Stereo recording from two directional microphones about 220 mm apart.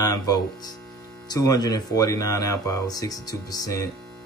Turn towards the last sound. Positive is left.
turn(degrees=15)  # may be behind; listen again after turning